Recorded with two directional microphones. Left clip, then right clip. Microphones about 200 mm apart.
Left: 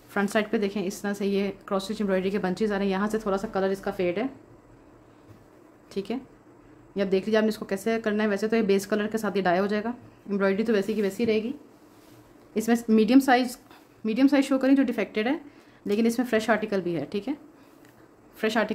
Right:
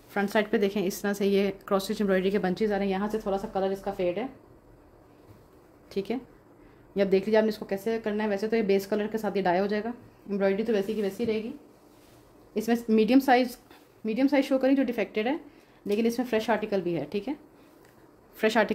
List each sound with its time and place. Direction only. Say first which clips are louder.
0.1 s speech: even; centre (ahead or behind); by 4.3 s 25° left (ahead or behind)
5.9 s speech: right 1 dB; 10° right (ahead or behind)
7.4 s speech: left 2 dB; 10° left (ahead or behind)
12.5 s speech: left 2 dB; 5° left (ahead or behind)
18.4 s speech: right 1 dB; 10° right (ahead or behind)